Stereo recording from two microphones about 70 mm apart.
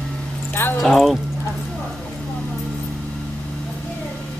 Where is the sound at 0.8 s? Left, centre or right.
Centre.